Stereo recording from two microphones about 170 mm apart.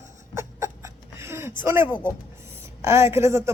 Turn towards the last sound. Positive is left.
turn(degrees=-15)  # may be behind; listen again after turning